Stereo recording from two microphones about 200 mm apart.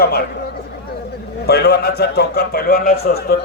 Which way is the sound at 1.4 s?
55° left (ahead or behind).